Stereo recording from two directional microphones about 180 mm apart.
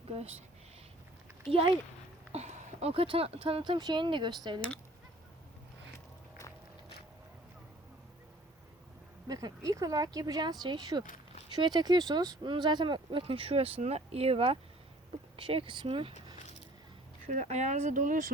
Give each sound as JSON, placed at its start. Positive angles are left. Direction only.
{"t": 1.5, "sound": "speech", "side_deg": -30}
{"t": 9.2, "sound": "speech", "side_deg": -20}
{"t": 16.1, "sound": "keys jangling", "side_deg": 40}
{"t": 17.2, "sound": "speech", "side_deg": -40}